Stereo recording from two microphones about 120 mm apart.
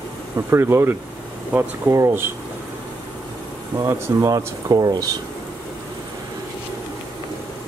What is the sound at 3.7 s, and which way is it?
Speech, 25° right (ahead or behind).